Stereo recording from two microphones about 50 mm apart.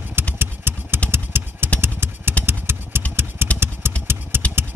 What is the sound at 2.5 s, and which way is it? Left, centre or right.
Vehicle, right.